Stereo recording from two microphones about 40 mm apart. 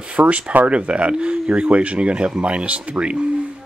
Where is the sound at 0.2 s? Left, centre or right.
Right.